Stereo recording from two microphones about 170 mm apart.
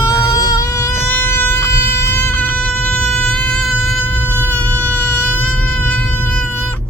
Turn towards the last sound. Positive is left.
turn(degrees=10)  # may be behind; listen again after turning